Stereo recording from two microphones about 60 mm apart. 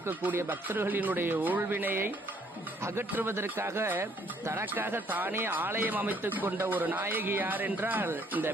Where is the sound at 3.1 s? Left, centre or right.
Right.